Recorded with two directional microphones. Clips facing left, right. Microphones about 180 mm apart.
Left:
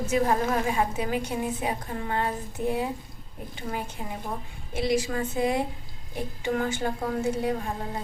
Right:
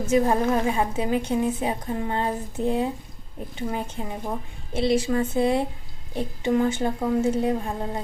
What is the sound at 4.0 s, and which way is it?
A woman's voice, 25° right (ahead or behind).